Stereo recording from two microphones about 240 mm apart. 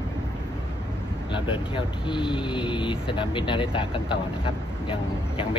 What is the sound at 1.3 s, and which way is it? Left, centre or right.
Speech, centre.